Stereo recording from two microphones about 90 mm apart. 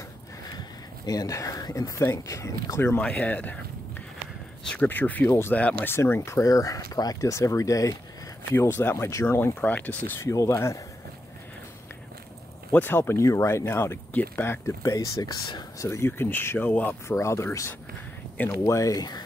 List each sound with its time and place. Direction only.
1.0 s speech: 40° left (ahead or behind)
3.0 s speech: 15° left (ahead or behind)
4.8 s speech: 20° left (ahead or behind)
5.9 s speech: 25° left (ahead or behind)
8.5 s speech: 25° left (ahead or behind)
10.1 s speech: 30° left (ahead or behind)
12.7 s speech: 20° left (ahead or behind)
14.9 s speech: 35° left (ahead or behind); by 16.9 s 20° left (ahead or behind)
17.1 s speech: 30° left (ahead or behind)